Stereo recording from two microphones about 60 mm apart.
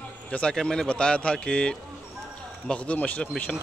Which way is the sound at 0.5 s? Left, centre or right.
Centre.